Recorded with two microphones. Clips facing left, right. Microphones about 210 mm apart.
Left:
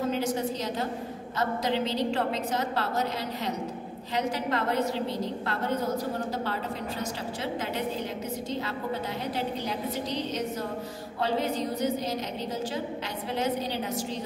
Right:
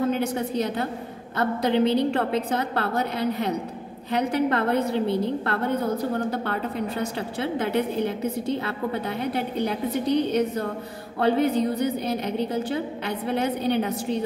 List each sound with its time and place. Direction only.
0.1 s a woman's voice: 60° right (ahead or behind)